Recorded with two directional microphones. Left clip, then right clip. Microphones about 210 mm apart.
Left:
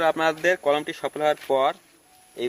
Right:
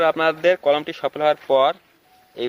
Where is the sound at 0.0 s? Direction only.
25° right (ahead or behind).